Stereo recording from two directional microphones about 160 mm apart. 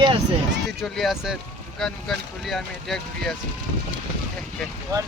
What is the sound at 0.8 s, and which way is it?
Speech, centre (ahead or behind).